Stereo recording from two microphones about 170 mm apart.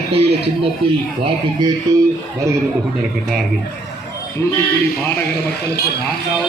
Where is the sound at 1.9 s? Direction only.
20° right (ahead or behind).